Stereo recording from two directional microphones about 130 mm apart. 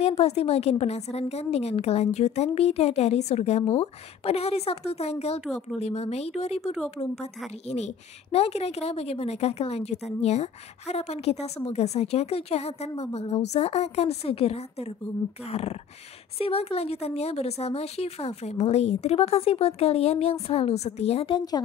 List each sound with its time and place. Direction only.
0.0 s a woman's voice: 50° left (ahead or behind)
5.4 s speech: centre (ahead or behind)
5.8 s a woman's voice: 55° left (ahead or behind)